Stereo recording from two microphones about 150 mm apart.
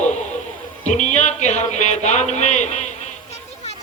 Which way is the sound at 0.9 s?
50° left (ahead or behind).